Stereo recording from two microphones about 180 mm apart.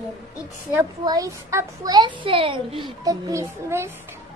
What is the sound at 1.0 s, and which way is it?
A child's voice, 20° right (ahead or behind).